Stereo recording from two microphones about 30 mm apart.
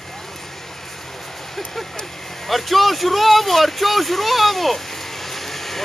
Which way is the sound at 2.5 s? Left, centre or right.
Centre.